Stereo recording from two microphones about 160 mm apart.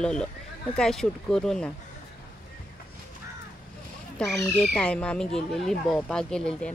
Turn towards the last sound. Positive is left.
turn(degrees=5)  # may be behind; listen again after turning